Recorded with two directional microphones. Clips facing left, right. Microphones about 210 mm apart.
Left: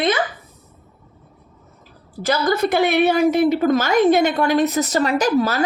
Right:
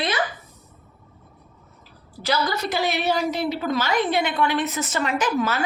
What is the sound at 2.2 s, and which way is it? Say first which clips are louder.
A woman's voice: left 6 dB; 50° left (ahead or behind).